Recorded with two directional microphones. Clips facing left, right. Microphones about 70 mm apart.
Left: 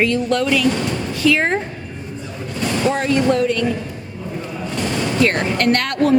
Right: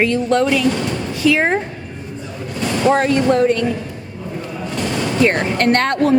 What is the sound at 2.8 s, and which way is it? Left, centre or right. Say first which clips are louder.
Speech: right 3 dB; right.